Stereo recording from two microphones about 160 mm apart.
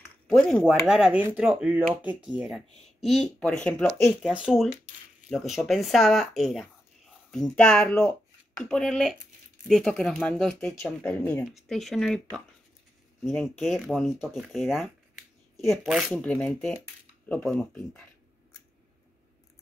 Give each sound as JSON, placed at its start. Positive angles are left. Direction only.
{"t": 0.4, "sound": "speech", "side_deg": 0}